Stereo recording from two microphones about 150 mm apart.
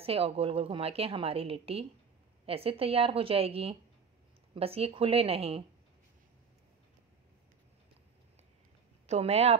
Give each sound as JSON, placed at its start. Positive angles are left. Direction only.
{"t": 0.0, "sound": "a woman's voice", "side_deg": -40}
{"t": 9.0, "sound": "speech", "side_deg": -45}